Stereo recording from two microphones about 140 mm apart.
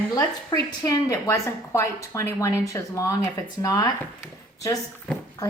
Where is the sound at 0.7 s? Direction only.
30° left (ahead or behind).